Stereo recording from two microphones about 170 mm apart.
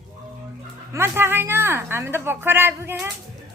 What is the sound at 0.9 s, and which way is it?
A woman's voice, 15° right (ahead or behind).